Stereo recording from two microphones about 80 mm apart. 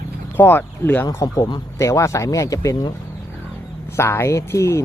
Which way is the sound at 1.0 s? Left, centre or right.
Left.